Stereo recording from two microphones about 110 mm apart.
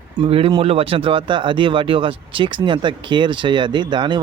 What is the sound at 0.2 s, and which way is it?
Speech, 60° right (ahead or behind).